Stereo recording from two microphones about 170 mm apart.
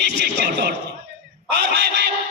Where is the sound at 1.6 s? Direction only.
80° right.